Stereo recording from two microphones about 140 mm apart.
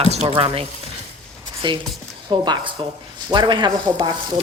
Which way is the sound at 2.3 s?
35° right (ahead or behind).